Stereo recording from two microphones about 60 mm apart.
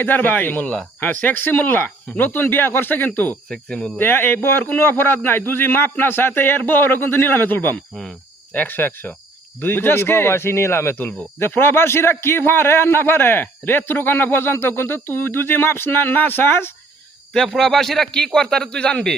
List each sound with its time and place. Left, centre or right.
0.0 s speech: left
3.5 s a man's voice: centre
3.9 s speech: left
17.3 s a man's voice: centre